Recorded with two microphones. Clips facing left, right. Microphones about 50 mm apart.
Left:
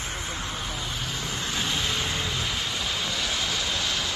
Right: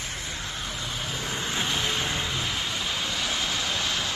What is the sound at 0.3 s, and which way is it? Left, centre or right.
Vehicle, centre.